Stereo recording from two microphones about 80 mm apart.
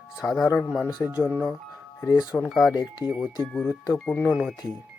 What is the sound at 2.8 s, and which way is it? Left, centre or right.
Speech, left.